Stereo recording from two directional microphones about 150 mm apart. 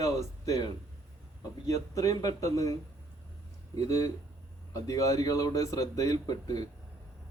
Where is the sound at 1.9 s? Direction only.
20° left (ahead or behind).